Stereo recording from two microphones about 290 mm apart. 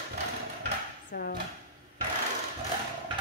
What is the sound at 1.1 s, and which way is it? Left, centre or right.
Speech, left.